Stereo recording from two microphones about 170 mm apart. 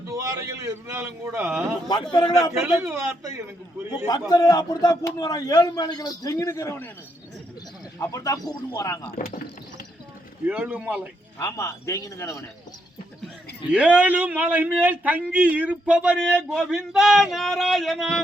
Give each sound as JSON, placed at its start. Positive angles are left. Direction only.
{"t": 0.1, "sound": "a man's voice", "side_deg": -20}
{"t": 4.3, "sound": "a man's voice", "side_deg": 25}
{"t": 7.9, "sound": "a man's voice", "side_deg": 20}
{"t": 10.4, "sound": "a man's voice", "side_deg": -10}
{"t": 11.3, "sound": "a man's voice", "side_deg": 15}
{"t": 13.7, "sound": "a man's voice", "side_deg": -5}